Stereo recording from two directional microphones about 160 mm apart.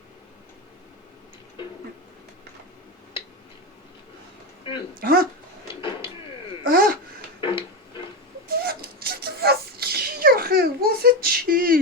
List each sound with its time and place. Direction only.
1.6 s a sound: 30° left (ahead or behind)
4.9 s speech: 65° right (ahead or behind)
6.7 s babbling: 65° right (ahead or behind)
7.4 s music: 30° left (ahead or behind)
8.4 s sneeze: 70° right (ahead or behind)